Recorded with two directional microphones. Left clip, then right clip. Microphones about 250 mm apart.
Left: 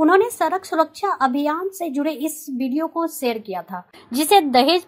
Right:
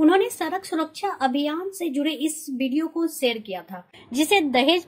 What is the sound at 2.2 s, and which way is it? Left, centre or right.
Speech, left.